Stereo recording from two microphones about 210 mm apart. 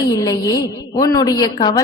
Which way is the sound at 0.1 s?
15° left (ahead or behind).